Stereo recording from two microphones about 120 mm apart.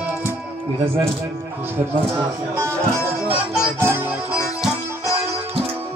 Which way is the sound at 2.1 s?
20° right (ahead or behind).